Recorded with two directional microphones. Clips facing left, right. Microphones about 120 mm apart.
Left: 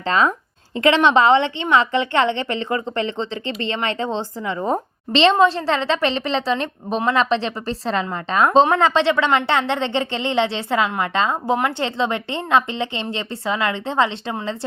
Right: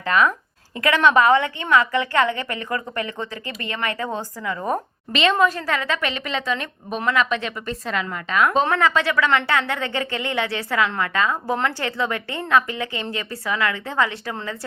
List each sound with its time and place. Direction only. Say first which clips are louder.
0.0 s a woman's voice: left 1 dB; 25° left (ahead or behind)